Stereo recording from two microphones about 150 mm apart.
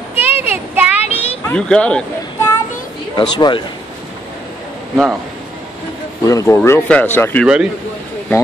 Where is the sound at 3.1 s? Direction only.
30° left (ahead or behind).